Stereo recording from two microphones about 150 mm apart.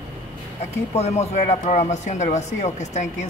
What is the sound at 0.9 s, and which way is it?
Speech, 45° left (ahead or behind).